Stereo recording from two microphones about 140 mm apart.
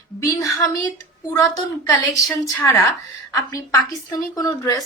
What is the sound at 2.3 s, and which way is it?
Speech, 15° left (ahead or behind).